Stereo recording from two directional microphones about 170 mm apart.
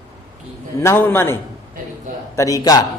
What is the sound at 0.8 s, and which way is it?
A man's voice, 15° left (ahead or behind).